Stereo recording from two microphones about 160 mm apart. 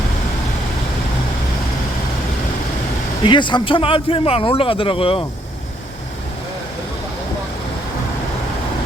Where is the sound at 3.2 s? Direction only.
30° left (ahead or behind).